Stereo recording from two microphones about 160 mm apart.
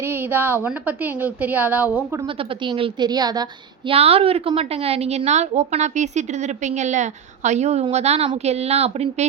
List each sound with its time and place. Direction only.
0.0 s a woman's voice: 15° right (ahead or behind)
2.2 s a woman's voice: 30° right (ahead or behind)
3.9 s a woman's voice: 40° right (ahead or behind)